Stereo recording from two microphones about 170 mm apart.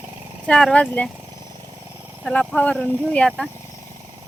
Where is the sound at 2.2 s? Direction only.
5° left (ahead or behind).